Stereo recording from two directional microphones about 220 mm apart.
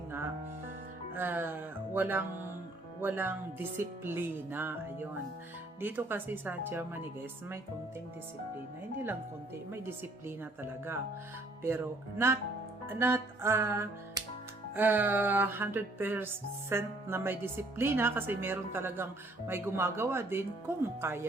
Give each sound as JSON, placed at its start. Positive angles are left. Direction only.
{"t": 1.1, "sound": "speech", "side_deg": -10}
{"t": 3.0, "sound": "music", "side_deg": -10}
{"t": 9.7, "sound": "music", "side_deg": -10}